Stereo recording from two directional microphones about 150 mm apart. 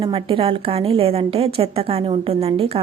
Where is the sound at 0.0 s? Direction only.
35° right (ahead or behind).